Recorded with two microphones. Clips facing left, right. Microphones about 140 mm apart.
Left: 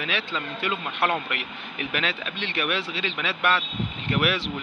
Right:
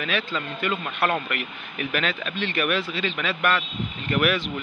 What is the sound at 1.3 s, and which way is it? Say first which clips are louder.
Speech: right 2 dB; 25° left (ahead or behind).